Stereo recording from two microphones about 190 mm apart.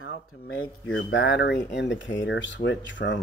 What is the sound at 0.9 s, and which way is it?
Speech, 75° left (ahead or behind).